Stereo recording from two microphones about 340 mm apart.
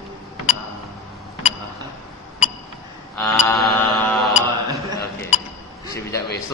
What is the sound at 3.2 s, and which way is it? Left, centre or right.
Mantra, centre.